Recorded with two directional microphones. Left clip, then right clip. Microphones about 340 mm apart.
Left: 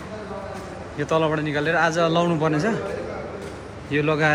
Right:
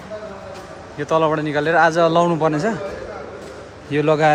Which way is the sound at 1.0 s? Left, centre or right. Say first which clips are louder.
Right 4 dB; centre.